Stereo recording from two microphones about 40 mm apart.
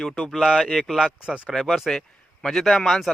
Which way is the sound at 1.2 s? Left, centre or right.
Right.